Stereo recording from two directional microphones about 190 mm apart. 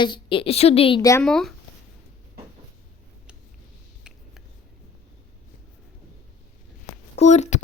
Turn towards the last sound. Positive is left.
turn(degrees=40)  # may be behind; listen again after turning